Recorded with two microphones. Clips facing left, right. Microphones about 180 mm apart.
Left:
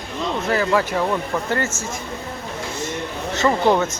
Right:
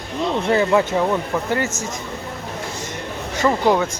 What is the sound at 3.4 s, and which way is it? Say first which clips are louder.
Speech: even; 5° right (ahead or behind).